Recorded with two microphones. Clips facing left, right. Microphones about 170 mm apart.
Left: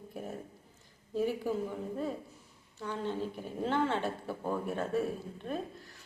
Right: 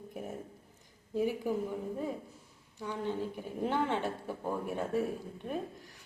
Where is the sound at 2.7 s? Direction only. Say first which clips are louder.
Even; 15° right (ahead or behind).